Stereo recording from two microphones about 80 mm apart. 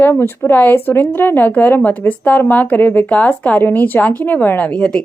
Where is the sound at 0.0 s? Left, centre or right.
Left.